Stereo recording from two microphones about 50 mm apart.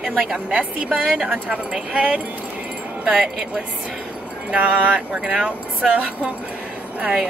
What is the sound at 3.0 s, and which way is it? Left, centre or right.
Speech, centre.